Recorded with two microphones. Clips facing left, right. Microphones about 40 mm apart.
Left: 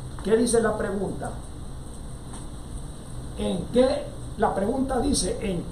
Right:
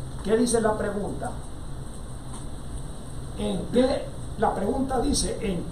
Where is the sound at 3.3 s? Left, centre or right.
Centre.